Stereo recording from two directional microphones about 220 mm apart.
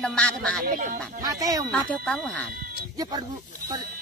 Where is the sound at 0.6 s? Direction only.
35° right (ahead or behind).